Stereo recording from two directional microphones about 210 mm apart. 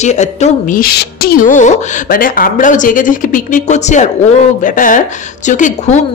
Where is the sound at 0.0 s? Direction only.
35° left (ahead or behind).